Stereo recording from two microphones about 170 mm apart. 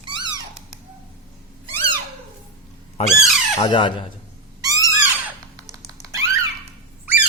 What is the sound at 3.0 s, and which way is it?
Speech, 35° left (ahead or behind).